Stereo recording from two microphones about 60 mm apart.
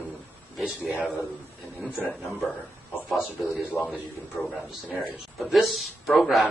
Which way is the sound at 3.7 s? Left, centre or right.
Left.